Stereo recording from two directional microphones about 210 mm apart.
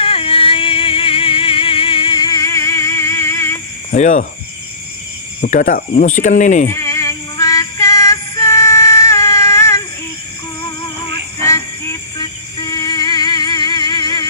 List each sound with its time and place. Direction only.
0.0 s music: 25° left (ahead or behind)
3.9 s speech: 35° left (ahead or behind)
5.4 s speech: 40° left (ahead or behind)
6.7 s synthetic singing: 15° left (ahead or behind)
11.4 s music: 15° left (ahead or behind)